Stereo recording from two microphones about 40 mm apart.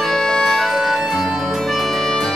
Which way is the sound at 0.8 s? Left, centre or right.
Centre.